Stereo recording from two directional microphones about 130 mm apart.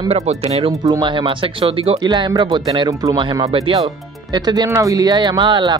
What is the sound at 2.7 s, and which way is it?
Speech, 25° right (ahead or behind).